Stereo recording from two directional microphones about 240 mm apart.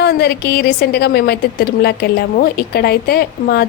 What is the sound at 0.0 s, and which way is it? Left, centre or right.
A woman's voice, left.